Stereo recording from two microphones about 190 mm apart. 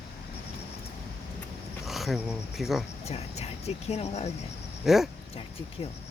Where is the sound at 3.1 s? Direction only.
35° left (ahead or behind).